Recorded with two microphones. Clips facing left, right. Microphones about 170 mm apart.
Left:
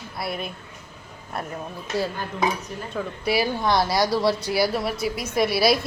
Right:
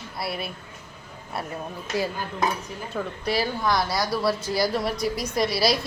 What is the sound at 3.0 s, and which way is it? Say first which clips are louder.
Speech: left 2 dB; 10° left (ahead or behind).